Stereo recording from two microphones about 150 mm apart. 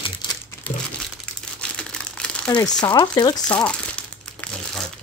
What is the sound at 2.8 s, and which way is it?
Speech, 30° left (ahead or behind).